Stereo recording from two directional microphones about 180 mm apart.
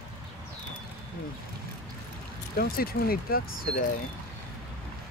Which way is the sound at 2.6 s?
55° left (ahead or behind).